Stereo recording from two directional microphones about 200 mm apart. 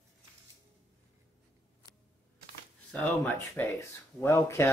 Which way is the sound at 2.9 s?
10° left (ahead or behind).